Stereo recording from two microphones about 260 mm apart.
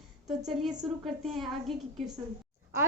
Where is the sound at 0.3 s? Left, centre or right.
Centre.